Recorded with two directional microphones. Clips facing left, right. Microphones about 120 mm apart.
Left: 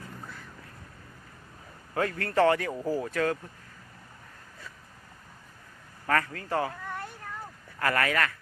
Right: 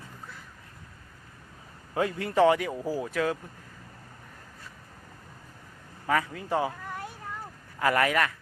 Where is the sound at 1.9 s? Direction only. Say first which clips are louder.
Right 1 dB; 15° right (ahead or behind).